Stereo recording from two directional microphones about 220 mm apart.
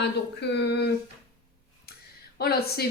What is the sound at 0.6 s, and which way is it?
Speech, 50° left (ahead or behind).